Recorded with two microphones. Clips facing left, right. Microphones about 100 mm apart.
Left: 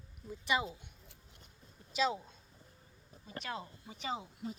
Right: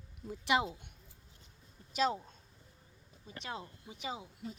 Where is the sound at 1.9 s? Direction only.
45° right (ahead or behind).